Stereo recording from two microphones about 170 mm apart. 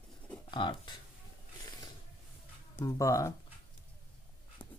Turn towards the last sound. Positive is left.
turn(degrees=25)  # may be behind; listen again after turning